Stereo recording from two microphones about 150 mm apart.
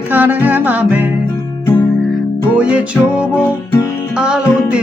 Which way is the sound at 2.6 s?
5° right (ahead or behind).